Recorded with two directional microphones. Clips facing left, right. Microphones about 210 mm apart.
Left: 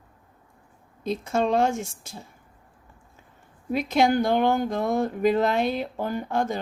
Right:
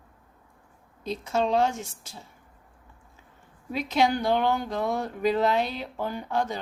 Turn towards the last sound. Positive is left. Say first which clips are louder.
# left 3 dB
turn(degrees=50)  # may be behind; listen again after turning